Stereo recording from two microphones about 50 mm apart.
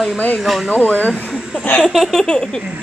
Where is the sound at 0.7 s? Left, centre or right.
Left.